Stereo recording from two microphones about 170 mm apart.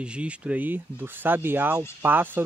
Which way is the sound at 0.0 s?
5° right (ahead or behind).